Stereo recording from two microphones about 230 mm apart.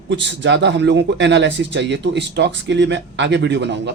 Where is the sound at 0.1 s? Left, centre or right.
Right.